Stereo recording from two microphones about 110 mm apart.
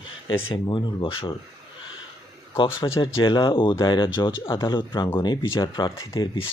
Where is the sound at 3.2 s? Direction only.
50° left (ahead or behind).